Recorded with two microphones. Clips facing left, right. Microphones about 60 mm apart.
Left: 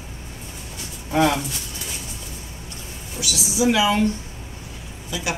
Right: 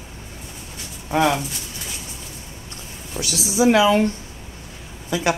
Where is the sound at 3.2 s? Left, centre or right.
Right.